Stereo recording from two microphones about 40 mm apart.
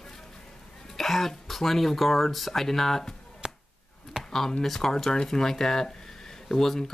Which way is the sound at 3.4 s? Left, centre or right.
Right.